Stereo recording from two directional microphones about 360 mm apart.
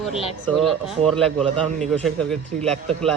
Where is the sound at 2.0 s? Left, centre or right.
Centre.